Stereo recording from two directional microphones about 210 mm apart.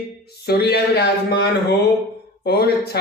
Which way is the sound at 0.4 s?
50° left (ahead or behind).